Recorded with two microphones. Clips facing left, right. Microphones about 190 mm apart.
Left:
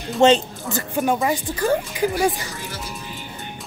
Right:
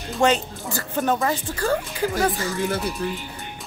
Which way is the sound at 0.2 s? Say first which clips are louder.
Left 5 dB; 20° left (ahead or behind).